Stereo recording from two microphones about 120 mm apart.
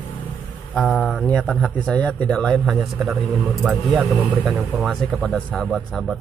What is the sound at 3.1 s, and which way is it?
A man's voice, 10° right (ahead or behind).